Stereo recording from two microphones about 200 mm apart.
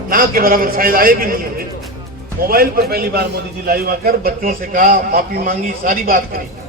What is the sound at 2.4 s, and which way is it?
A man's voice, 45° right (ahead or behind).